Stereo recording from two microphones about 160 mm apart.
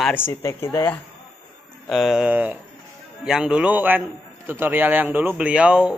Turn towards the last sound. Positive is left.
turn(degrees=-5)  # may be behind; listen again after turning